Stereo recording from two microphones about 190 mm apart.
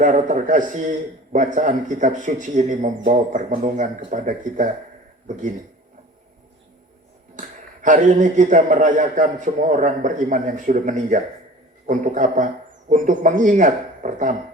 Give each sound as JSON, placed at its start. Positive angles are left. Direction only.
{"t": 0.0, "sound": "a man's voice", "side_deg": -40}
{"t": 7.3, "sound": "a man's voice", "side_deg": -45}